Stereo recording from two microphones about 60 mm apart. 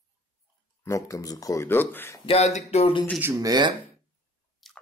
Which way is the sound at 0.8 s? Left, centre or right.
Left.